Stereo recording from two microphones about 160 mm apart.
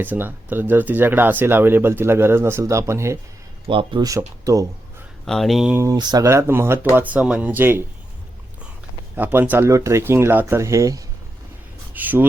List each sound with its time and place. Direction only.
0.0 s speech: 10° right (ahead or behind)
3.7 s speech: 30° right (ahead or behind)
5.2 s speech: centre (ahead or behind)
5.7 s speech: 20° right (ahead or behind)
9.1 s speech: 10° right (ahead or behind)